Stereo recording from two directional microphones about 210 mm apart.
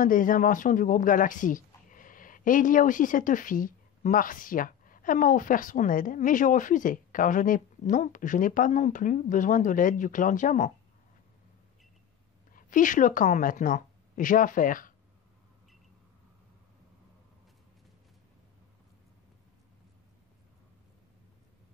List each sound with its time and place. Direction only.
0.0 s speech: 40° left (ahead or behind)
12.5 s a woman's voice: 40° left (ahead or behind)